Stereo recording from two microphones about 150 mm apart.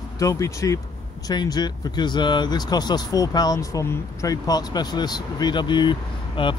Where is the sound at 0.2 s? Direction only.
20° left (ahead or behind).